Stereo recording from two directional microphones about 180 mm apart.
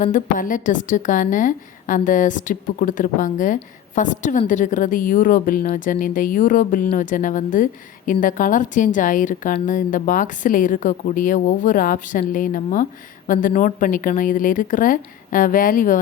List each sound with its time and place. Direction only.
0.0 s a woman's voice: 45° left (ahead or behind)